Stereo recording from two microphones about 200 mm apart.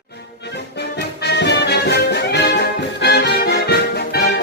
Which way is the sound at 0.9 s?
55° left (ahead or behind).